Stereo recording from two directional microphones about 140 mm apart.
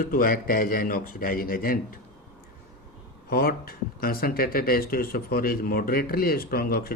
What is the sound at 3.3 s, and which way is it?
Speech, 90° left.